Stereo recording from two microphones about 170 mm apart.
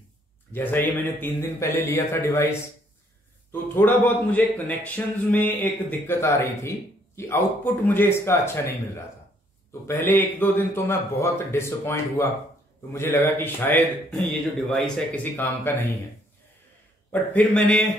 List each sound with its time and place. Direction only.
0.5 s a man's voice: 10° left (ahead or behind)
3.7 s a man's voice: 10° left (ahead or behind)
17.1 s a man's voice: 10° left (ahead or behind)